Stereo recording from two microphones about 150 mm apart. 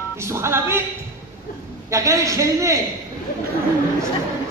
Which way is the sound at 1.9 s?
20° right (ahead or behind).